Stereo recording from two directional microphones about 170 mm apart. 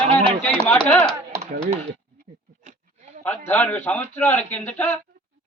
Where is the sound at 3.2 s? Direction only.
10° left (ahead or behind).